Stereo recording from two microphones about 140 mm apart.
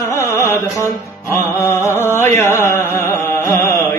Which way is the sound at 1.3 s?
20° left (ahead or behind).